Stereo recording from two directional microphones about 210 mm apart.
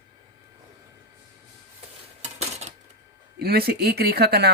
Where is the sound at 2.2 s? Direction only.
30° right (ahead or behind).